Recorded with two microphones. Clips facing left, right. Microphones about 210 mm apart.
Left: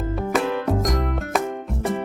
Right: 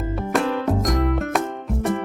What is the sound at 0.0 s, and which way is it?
Music, centre (ahead or behind).